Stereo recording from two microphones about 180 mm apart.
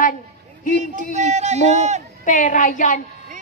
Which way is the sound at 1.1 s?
40° right (ahead or behind).